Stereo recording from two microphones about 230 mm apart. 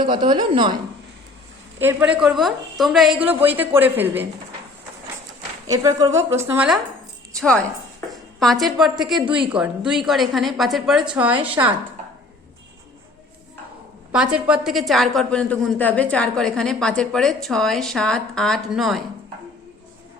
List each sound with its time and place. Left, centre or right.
0.0 s a woman's voice: centre
1.8 s a woman's voice: centre
5.6 s a woman's voice: centre
7.3 s a woman's voice: centre
9.2 s a woman's voice: right
9.5 s a woman's voice: centre
14.3 s a woman's voice: centre